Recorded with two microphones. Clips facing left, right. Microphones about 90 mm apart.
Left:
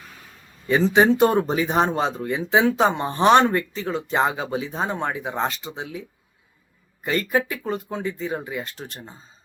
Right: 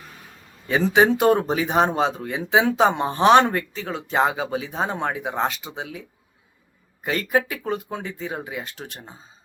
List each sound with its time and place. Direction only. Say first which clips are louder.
0.7 s speech: left 1 dB; 5° right (ahead or behind)
7.0 s speech: even; 5° right (ahead or behind)